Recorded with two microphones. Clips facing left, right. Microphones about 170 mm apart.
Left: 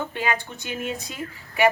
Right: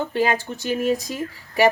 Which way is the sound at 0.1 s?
35° right (ahead or behind).